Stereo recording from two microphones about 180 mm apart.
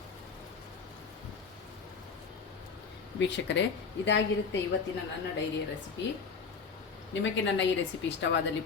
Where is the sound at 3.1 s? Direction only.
80° left.